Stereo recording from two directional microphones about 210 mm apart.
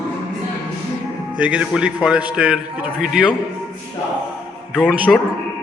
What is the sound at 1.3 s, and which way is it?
A man's voice, 5° right (ahead or behind).